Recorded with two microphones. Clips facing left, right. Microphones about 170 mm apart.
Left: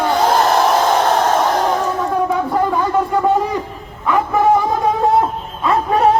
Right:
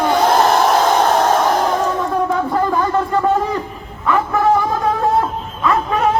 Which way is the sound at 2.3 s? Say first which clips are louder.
Even; 10° left (ahead or behind).